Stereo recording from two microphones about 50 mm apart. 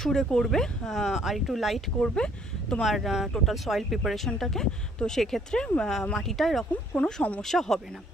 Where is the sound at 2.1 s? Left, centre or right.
Centre.